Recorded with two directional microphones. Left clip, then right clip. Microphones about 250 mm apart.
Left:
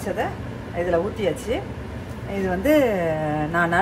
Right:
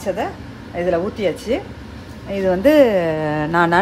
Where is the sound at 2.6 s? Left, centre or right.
Right.